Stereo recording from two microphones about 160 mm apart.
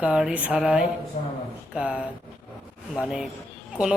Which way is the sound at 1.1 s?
45° left (ahead or behind).